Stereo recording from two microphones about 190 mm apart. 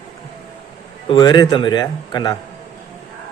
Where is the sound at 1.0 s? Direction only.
25° left (ahead or behind).